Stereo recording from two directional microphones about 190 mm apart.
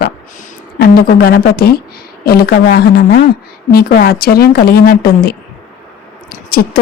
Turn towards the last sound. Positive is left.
turn(degrees=55)  # may be behind; listen again after turning